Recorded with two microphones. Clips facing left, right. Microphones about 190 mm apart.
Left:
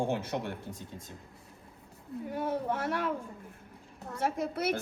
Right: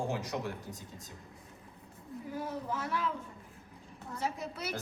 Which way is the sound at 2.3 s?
65° left (ahead or behind).